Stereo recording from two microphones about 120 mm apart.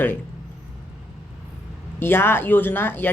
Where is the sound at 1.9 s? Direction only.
20° left (ahead or behind).